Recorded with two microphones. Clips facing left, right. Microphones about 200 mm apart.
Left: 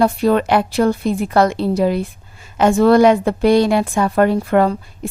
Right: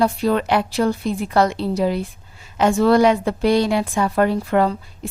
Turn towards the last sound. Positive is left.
turn(degrees=55)  # may be behind; listen again after turning